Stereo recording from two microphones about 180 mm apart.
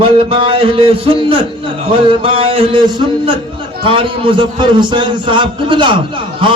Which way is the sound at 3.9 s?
30° right (ahead or behind).